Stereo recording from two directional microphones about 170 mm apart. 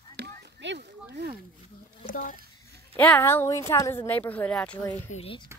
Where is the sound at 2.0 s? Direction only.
50° left (ahead or behind).